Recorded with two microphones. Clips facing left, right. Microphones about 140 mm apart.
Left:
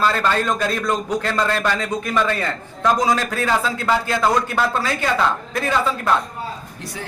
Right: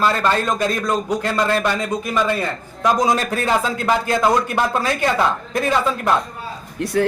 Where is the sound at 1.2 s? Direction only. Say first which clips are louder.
Right 2 dB; 10° right (ahead or behind).